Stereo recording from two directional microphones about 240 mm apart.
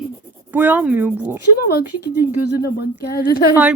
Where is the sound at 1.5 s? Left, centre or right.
Left.